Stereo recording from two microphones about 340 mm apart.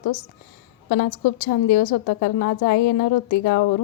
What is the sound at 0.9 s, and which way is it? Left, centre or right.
A woman's voice, left.